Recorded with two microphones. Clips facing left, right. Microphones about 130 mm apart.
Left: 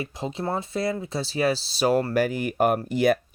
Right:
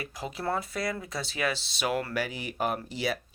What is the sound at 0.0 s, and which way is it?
Speech, 25° left (ahead or behind).